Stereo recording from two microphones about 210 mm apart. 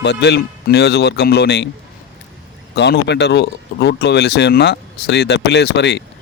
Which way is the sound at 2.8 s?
55° left (ahead or behind).